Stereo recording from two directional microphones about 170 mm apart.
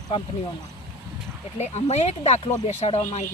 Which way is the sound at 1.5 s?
40° left (ahead or behind).